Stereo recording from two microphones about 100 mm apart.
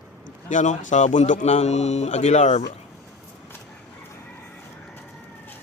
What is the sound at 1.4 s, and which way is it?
Speech, 90° left.